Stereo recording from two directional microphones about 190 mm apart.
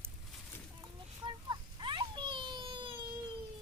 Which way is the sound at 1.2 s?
25° right (ahead or behind).